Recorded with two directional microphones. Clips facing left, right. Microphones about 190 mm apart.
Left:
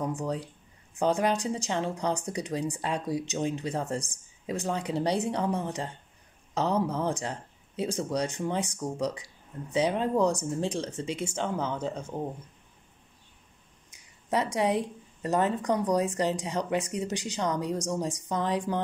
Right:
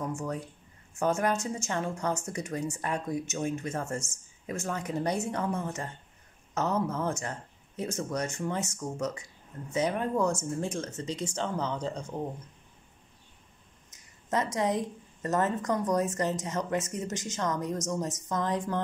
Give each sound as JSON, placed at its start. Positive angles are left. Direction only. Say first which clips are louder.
{"t": 0.0, "sound": "a woman's voice", "louder": "left 3 dB", "side_deg": 15}
{"t": 13.8, "sound": "a sound", "louder": "left 2 dB", "side_deg": 10}
{"t": 15.2, "sound": "a woman's voice", "louder": "left 2 dB", "side_deg": 15}